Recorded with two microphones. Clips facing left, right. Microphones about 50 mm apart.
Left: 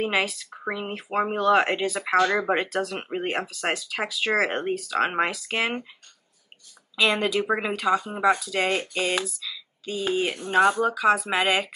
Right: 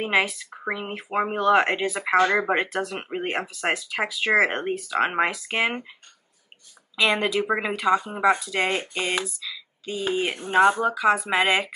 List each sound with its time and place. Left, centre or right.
0.0 s speech: centre
2.1 s speech: right
2.4 s speech: centre
7.0 s speech: centre
9.9 s speech: right; by 11.7 s centre